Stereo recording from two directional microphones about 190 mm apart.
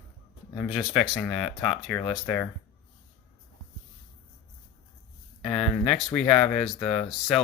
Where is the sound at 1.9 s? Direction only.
15° left (ahead or behind).